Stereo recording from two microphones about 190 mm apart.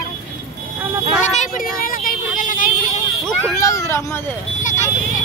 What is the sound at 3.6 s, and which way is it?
Speech, 15° left (ahead or behind).